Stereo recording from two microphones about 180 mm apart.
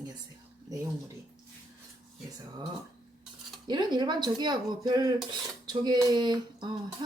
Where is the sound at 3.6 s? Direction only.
25° right (ahead or behind).